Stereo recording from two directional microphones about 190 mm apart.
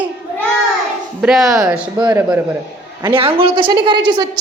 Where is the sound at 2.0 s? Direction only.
20° right (ahead or behind).